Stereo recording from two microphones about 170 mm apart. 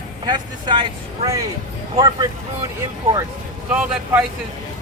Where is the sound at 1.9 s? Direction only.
25° right (ahead or behind).